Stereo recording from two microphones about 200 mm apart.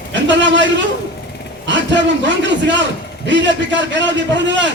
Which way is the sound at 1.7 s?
65° right (ahead or behind).